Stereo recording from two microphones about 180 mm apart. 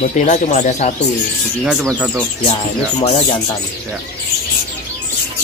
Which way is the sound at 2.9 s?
35° left (ahead or behind).